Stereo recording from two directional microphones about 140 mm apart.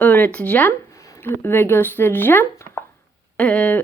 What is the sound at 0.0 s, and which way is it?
Speech, 10° left (ahead or behind).